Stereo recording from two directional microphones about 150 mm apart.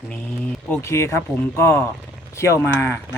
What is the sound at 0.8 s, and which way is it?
Speech, 20° left (ahead or behind).